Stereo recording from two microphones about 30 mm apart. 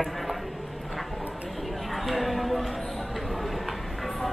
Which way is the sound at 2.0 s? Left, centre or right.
Centre.